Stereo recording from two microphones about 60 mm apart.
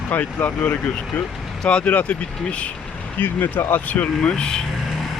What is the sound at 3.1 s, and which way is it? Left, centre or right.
Speech, left.